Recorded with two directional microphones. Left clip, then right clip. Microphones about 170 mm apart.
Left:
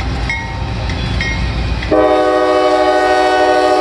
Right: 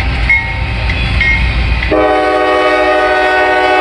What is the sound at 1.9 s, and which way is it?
Train, 20° left (ahead or behind).